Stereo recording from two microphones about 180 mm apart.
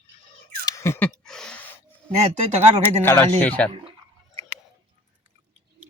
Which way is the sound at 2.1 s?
35° right (ahead or behind).